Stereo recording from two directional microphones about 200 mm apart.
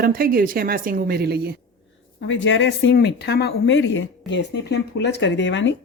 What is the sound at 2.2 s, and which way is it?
Speech, 70° left (ahead or behind).